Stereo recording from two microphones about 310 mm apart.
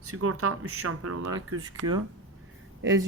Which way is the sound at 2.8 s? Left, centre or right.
Right.